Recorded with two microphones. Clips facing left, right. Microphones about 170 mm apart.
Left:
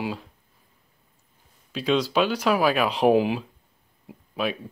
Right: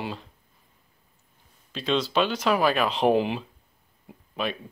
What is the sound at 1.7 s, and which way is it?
Speech, 10° left (ahead or behind).